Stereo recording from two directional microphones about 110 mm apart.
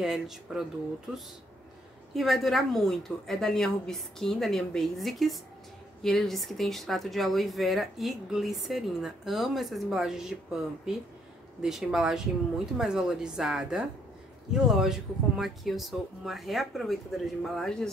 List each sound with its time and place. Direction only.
0.0 s speech: 5° right (ahead or behind)
2.1 s speech: centre (ahead or behind)